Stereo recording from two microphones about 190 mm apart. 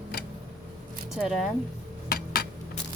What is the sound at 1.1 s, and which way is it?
Speech, centre (ahead or behind).